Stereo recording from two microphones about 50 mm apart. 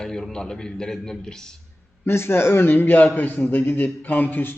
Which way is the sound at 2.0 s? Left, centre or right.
Left.